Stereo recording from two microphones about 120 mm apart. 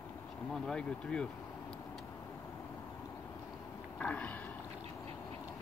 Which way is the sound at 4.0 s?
10° left (ahead or behind).